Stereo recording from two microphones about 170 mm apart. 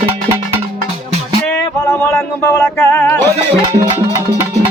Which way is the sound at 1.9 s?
15° left (ahead or behind).